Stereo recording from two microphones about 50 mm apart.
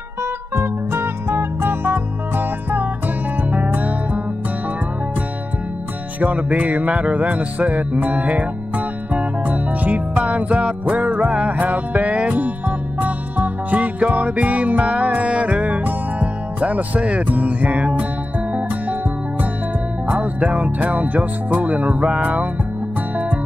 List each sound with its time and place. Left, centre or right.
0.6 s music: right
6.2 s music: right
20.1 s music: right